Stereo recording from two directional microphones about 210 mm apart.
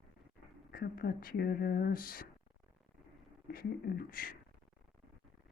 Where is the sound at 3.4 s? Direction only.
45° left (ahead or behind).